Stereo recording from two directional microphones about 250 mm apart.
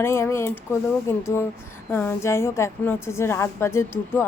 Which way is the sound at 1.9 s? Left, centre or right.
Centre.